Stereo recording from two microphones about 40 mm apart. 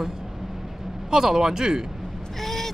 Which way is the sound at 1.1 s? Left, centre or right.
Centre.